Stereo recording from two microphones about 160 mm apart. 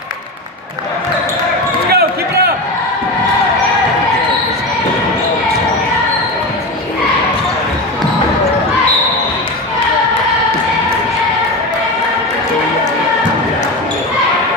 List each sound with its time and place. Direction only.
1.9 s basketball bounce: 80° right